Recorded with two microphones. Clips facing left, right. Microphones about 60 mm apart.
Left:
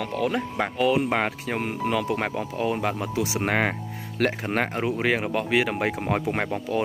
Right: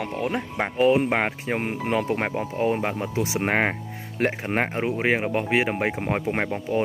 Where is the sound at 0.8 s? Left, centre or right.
Right.